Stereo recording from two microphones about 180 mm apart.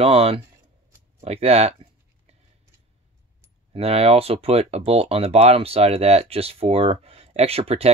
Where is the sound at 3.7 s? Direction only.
35° right (ahead or behind).